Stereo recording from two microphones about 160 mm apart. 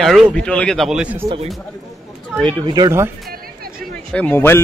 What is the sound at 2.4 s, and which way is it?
Speech, 25° right (ahead or behind).